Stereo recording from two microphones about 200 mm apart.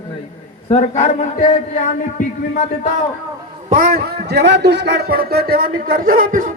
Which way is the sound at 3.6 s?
45° right (ahead or behind).